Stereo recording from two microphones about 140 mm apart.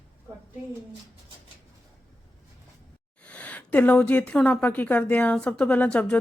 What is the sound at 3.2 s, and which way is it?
Speech, 10° left (ahead or behind).